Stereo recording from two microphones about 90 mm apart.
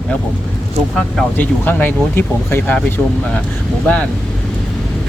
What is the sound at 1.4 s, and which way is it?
Speech, 20° left (ahead or behind).